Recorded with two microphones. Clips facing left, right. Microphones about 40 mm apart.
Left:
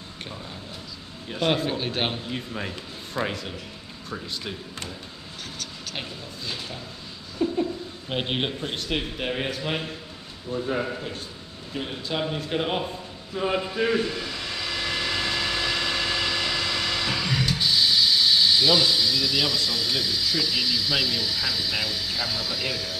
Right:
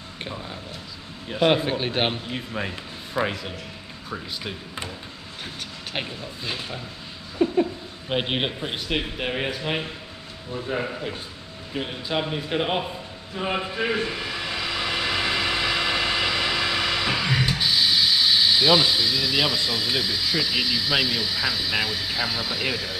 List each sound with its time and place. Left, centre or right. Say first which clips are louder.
1.3 s speech: right 4 dB; centre
5.6 s speech: right 4 dB; right
7.4 s a sound: right 3 dB; right
8.1 s speech: right 2 dB; centre
11.7 s speech: right 3 dB; centre
13.5 s vehicle: left 1 dB; centre